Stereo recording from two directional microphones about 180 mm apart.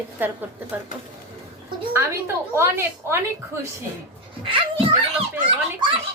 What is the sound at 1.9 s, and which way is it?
Speech, 15° right (ahead or behind).